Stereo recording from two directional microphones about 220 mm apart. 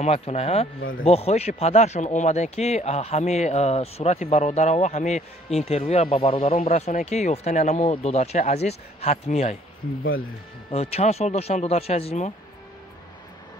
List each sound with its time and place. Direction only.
0.0 s speech: 30° left (ahead or behind)
10.7 s speech: 30° left (ahead or behind)